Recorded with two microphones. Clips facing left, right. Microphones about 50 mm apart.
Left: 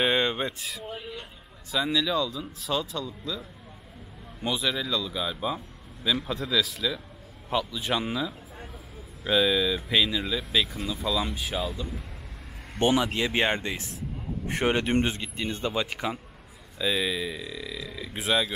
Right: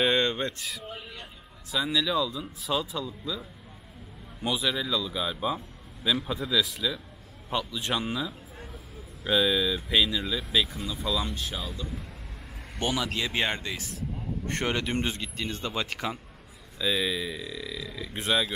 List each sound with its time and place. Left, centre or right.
0.0 s a man's voice: centre
12.7 s speech: left
14.5 s speech: centre
15.7 s speech: centre